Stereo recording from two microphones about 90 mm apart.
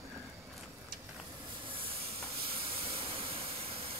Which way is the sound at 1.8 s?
90° right.